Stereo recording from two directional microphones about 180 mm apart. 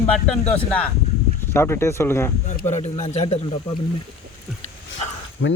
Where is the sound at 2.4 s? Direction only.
40° left (ahead or behind).